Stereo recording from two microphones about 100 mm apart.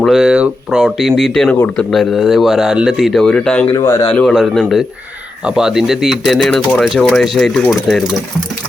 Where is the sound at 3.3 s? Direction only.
10° left (ahead or behind).